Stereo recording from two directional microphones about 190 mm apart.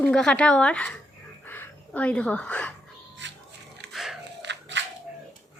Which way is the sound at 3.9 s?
Centre (ahead or behind).